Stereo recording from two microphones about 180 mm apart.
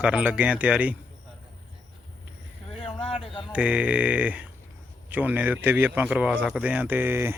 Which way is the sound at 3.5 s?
5° right (ahead or behind).